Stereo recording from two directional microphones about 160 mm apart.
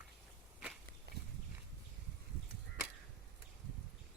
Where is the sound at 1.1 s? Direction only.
85° right.